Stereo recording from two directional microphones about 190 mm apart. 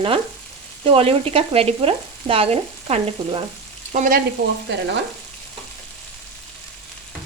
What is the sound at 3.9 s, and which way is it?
Sizzle, 45° right (ahead or behind).